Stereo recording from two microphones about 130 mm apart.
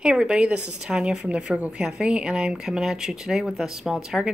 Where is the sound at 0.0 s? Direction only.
5° right (ahead or behind).